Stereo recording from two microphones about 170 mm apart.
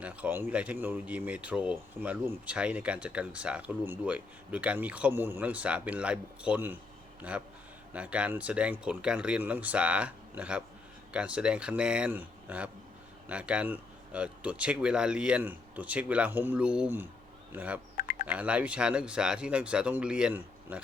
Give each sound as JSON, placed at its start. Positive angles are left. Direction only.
{"t": 0.0, "sound": "speech", "side_deg": -10}
{"t": 17.5, "sound": "fowl", "side_deg": -10}
{"t": 17.9, "sound": "fowl", "side_deg": 50}
{"t": 18.3, "sound": "speech", "side_deg": -10}